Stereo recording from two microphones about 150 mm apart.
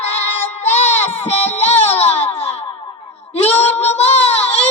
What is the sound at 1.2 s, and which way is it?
Child singing, 45° left (ahead or behind).